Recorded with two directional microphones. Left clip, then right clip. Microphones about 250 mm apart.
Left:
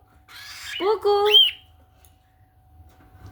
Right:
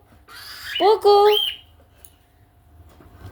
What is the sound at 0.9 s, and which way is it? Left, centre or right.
Squawk, left.